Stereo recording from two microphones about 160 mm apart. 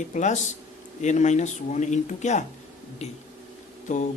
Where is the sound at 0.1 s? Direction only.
50° left (ahead or behind).